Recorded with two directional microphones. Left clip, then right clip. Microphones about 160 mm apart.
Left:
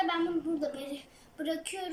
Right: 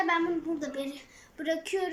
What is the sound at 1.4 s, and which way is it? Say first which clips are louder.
Speech: right 3 dB; 10° left (ahead or behind).